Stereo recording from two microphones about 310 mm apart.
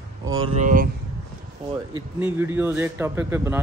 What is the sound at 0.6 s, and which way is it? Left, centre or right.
Speech, right.